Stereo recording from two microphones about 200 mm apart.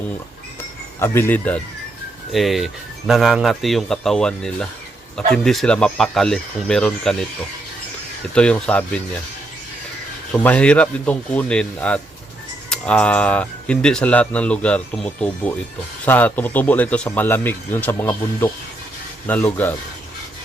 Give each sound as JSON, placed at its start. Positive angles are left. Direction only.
{"t": 0.9, "sound": "speech", "side_deg": 10}
{"t": 8.4, "sound": "speech", "side_deg": 5}
{"t": 10.3, "sound": "speech", "side_deg": 10}